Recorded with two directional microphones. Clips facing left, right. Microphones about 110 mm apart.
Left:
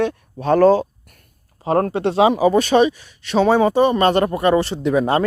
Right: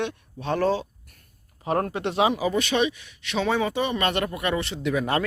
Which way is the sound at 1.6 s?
30° left (ahead or behind).